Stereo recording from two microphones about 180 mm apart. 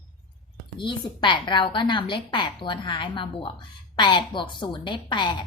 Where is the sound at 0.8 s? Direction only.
25° left (ahead or behind).